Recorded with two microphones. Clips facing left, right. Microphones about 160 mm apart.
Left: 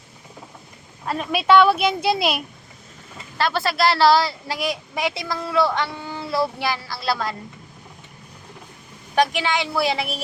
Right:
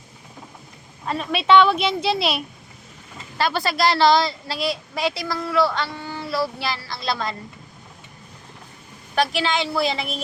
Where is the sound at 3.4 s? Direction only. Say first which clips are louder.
Even; centre (ahead or behind).